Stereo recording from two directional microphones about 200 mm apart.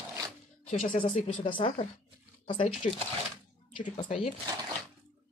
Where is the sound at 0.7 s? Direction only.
40° left (ahead or behind); by 2.7 s 25° left (ahead or behind).